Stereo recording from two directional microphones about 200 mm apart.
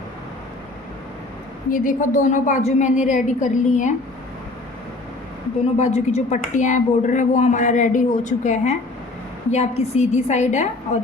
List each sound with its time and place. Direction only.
1.7 s a woman's voice: 40° left (ahead or behind)
5.7 s a woman's voice: 30° left (ahead or behind)